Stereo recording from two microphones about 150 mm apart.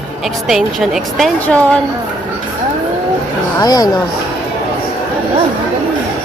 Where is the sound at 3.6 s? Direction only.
25° left (ahead or behind).